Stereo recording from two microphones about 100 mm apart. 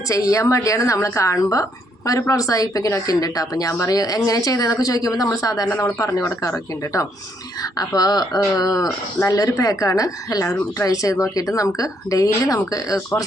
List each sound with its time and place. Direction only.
0.1 s a woman's voice: 35° left (ahead or behind)